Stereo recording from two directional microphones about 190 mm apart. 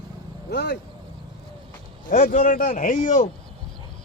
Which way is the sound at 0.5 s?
60° left (ahead or behind).